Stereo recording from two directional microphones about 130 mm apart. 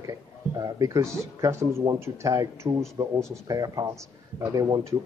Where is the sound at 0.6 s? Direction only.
25° right (ahead or behind).